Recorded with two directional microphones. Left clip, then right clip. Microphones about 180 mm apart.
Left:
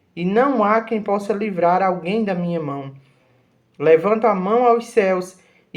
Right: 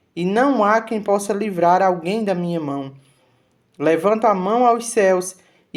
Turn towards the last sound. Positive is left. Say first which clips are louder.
# right 3 dB
turn(degrees=-35)  # may be behind; listen again after turning